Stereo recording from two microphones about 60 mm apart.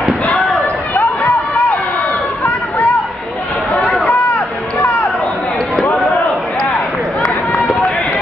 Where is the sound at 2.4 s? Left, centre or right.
Left.